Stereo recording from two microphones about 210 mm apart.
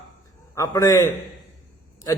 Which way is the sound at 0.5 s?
15° left (ahead or behind).